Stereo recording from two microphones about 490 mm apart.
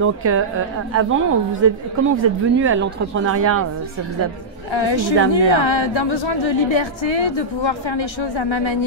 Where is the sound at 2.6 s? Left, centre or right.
Right.